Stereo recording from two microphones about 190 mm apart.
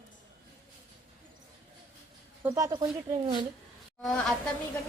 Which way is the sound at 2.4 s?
15° right (ahead or behind).